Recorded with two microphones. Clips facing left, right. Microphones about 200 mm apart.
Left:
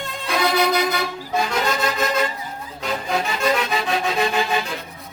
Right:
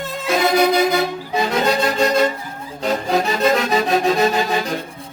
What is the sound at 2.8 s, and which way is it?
Music, 35° right (ahead or behind).